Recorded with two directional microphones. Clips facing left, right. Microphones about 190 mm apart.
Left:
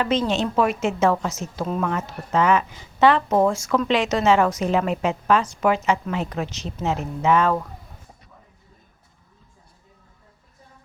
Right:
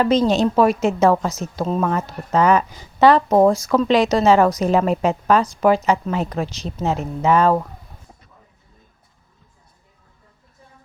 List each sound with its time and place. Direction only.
0.0 s a woman's voice: 40° right (ahead or behind)